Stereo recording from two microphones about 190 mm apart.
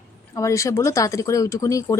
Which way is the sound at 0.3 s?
15° left (ahead or behind).